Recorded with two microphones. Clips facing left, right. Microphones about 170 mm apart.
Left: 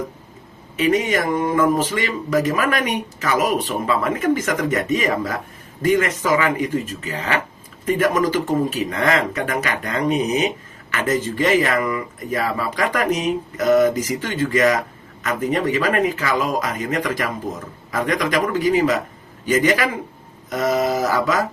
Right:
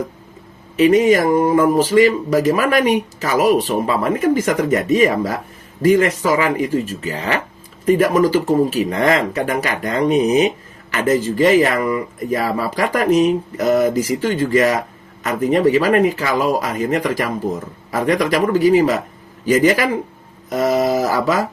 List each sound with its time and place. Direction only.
0.8 s speech: 35° right (ahead or behind)